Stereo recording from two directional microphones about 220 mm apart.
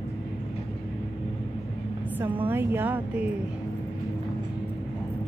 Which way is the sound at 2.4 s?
10° right (ahead or behind).